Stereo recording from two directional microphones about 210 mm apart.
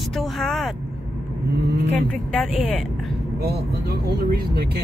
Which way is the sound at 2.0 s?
Centre (ahead or behind).